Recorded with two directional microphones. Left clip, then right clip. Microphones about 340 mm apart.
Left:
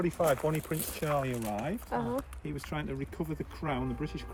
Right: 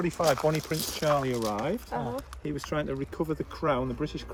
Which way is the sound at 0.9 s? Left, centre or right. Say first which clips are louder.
Right 6 dB; centre.